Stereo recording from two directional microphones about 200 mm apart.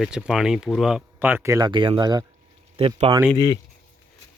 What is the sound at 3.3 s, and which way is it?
Speech, 20° left (ahead or behind).